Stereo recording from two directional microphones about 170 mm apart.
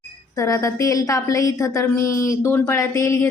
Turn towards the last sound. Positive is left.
turn(degrees=15)  # may be behind; listen again after turning